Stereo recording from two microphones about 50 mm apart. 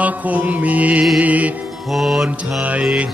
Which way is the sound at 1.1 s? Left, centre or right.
Right.